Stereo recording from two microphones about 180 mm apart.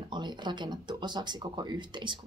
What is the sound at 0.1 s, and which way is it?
Speech, 25° right (ahead or behind).